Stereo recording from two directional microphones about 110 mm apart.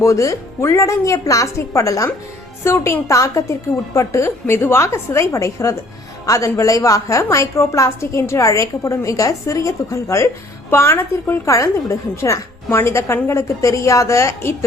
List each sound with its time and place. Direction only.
0.0 s a woman's voice: 30° left (ahead or behind)